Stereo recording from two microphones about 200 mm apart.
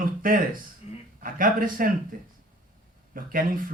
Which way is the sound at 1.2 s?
45° right (ahead or behind).